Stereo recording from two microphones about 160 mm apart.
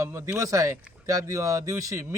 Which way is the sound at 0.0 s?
15° right (ahead or behind).